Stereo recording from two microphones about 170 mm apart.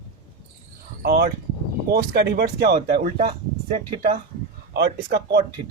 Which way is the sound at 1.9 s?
70° right (ahead or behind).